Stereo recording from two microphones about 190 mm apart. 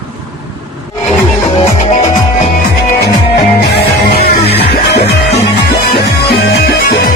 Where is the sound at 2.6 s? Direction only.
60° left (ahead or behind).